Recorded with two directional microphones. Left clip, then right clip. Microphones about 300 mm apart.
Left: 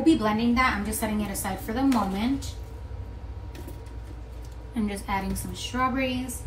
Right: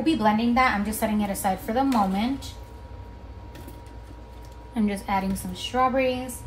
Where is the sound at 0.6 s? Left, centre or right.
Right.